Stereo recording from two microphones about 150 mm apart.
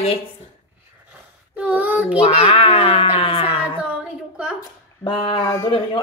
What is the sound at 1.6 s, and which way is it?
Speech, 10° right (ahead or behind).